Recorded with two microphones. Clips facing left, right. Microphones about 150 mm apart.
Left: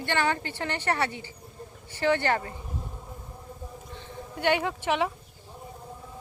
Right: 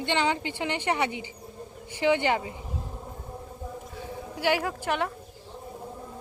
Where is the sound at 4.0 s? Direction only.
5° right (ahead or behind).